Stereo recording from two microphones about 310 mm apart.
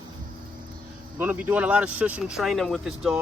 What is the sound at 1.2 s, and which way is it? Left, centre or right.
Speech, centre.